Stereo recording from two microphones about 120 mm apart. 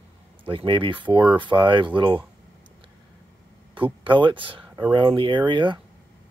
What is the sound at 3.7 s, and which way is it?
Speech, 45° right (ahead or behind).